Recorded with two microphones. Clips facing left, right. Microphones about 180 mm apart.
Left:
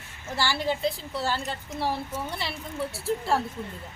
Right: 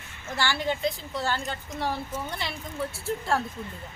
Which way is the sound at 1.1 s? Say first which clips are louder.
Even; 5° left (ahead or behind).